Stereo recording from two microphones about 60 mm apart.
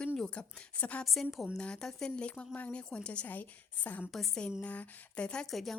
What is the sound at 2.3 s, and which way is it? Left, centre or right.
A woman's voice, left.